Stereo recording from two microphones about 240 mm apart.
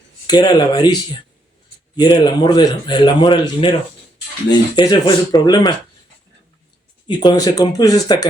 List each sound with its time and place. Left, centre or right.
0.3 s speech: centre
2.1 s speech: centre
7.1 s speech: centre